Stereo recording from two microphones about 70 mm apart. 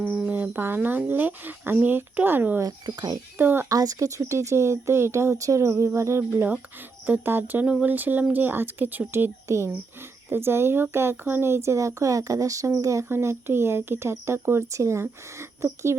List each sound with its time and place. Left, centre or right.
0.3 s speech: right
2.8 s speech: right
3.3 s speech: right
3.7 s speech: right
9.5 s speech: right
10.2 s speech: right